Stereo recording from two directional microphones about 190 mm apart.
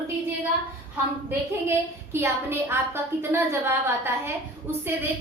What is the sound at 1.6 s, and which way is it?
A woman's voice, 15° right (ahead or behind).